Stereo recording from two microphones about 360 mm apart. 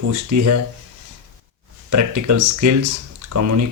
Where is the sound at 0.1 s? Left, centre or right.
Right.